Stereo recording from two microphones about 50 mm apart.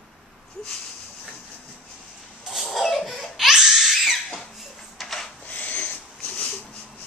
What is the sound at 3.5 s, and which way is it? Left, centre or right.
Crying, centre.